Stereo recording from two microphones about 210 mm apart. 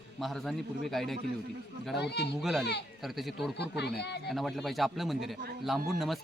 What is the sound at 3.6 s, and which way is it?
Speech, 50° left (ahead or behind).